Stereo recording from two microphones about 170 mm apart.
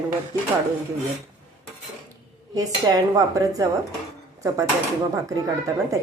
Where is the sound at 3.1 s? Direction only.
20° right (ahead or behind).